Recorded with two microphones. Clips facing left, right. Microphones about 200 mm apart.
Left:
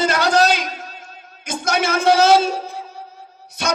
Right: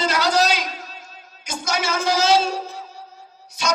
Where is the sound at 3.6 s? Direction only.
60° left (ahead or behind).